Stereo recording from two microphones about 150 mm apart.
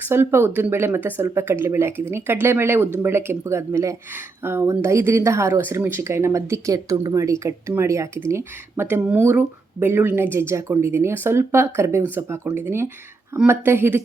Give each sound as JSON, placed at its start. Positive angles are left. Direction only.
{"t": 0.0, "sound": "speech", "side_deg": -15}